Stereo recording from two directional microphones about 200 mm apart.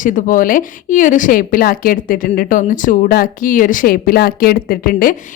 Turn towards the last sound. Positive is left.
turn(degrees=45)  # may be behind; listen again after turning